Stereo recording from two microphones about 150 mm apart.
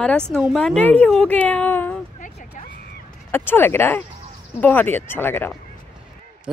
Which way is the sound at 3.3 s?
15° left (ahead or behind).